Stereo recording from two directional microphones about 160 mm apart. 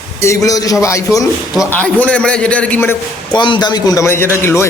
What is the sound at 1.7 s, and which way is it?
A man's voice, 10° left (ahead or behind).